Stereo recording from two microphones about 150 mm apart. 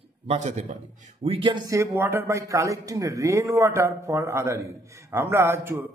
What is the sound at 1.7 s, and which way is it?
A man's voice, 15° right (ahead or behind).